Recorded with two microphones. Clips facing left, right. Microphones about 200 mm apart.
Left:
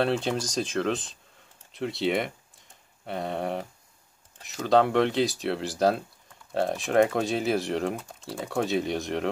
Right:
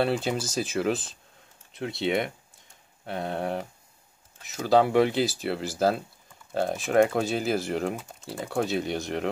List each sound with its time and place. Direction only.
0.0 s speech: 5° right (ahead or behind)